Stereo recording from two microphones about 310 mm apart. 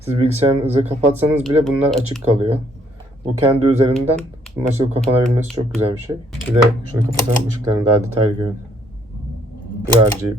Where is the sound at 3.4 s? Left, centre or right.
Centre.